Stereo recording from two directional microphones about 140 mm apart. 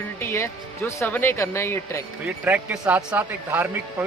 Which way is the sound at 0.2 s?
20° left (ahead or behind).